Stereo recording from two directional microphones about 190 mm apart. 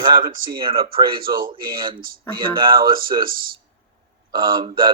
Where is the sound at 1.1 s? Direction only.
50° right (ahead or behind).